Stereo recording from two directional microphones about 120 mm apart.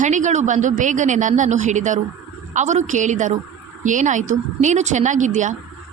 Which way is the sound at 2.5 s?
80° right.